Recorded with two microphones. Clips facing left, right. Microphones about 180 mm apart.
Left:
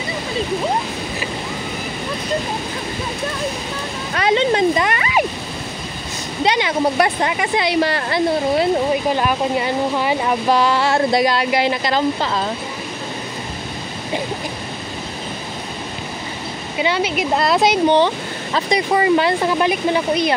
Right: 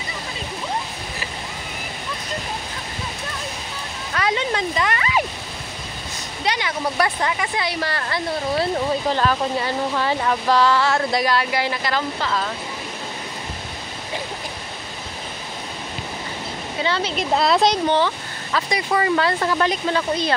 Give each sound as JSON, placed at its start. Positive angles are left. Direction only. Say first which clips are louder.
{"t": 4.1, "sound": "speech", "louder": "left 6 dB", "side_deg": 25}
{"t": 6.4, "sound": "speech", "louder": "left 7 dB", "side_deg": 25}
{"t": 10.9, "sound": "speech", "louder": "left 4 dB", "side_deg": 30}
{"t": 16.7, "sound": "speech", "louder": "left 4 dB", "side_deg": 15}
{"t": 17.8, "sound": "speech", "louder": "left 5 dB", "side_deg": 20}